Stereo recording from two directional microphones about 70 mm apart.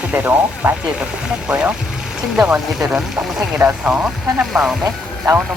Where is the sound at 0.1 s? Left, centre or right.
Right; by 4.8 s centre.